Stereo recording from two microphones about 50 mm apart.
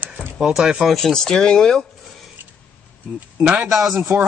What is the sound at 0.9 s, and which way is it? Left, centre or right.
Speech, centre.